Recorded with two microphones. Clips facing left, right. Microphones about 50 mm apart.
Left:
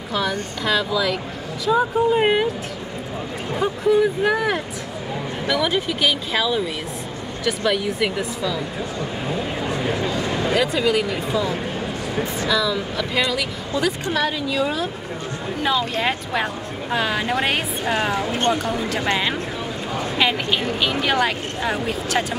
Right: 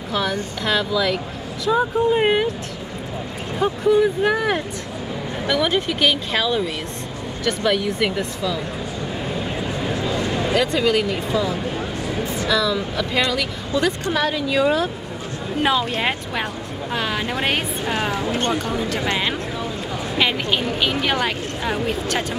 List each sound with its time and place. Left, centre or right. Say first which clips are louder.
0.1 s speech: even; centre
3.8 s speech: right 1 dB; centre
10.2 s speech: even; centre
14.5 s speech: right 4 dB; centre
16.9 s speech: left 3 dB; centre
20.2 s speech: right 1 dB; centre